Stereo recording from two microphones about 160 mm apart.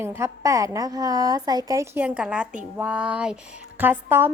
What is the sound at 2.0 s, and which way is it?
Speech, 5° right (ahead or behind).